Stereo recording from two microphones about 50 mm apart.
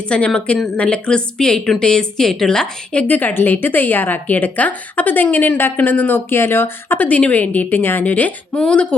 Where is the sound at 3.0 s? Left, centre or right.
Left.